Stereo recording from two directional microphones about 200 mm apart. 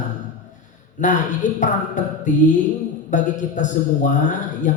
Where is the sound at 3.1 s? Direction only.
40° left (ahead or behind).